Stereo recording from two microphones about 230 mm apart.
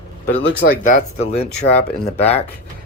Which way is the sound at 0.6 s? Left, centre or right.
Left.